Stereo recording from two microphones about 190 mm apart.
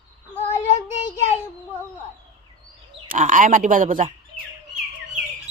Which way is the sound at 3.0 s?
40° right (ahead or behind).